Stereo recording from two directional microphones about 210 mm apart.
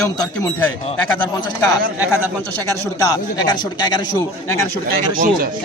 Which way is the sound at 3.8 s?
20° left (ahead or behind).